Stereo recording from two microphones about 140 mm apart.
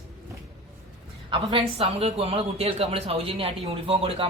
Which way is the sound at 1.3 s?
40° right (ahead or behind).